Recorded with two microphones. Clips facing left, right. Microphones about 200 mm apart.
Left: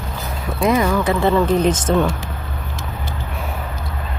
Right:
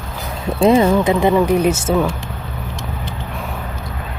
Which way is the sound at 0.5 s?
30° right (ahead or behind).